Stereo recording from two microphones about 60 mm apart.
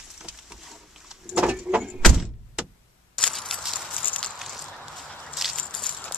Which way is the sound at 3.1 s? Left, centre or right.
Centre.